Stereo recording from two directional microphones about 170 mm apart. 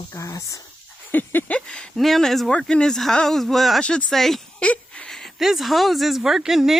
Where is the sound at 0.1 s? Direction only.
20° left (ahead or behind).